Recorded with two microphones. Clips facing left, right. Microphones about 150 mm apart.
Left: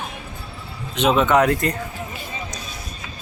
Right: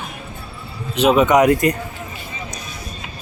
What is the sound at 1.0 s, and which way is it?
Speech, 10° right (ahead or behind).